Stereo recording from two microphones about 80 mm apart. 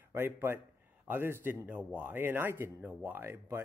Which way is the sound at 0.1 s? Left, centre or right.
Right.